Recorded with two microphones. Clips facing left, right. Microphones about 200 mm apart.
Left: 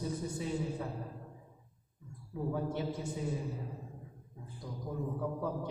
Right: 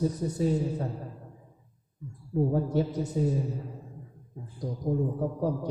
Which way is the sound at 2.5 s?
40° right (ahead or behind).